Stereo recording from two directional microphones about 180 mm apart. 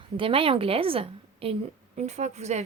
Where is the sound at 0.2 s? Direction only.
30° right (ahead or behind).